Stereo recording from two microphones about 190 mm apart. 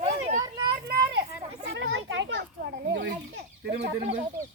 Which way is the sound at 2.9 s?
70° right (ahead or behind).